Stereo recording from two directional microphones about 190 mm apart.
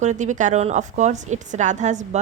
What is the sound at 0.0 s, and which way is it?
A woman's voice, 40° right (ahead or behind).